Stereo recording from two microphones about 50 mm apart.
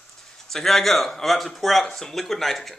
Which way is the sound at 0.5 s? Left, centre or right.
Centre.